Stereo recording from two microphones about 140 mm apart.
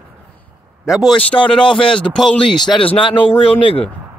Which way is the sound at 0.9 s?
5° right (ahead or behind).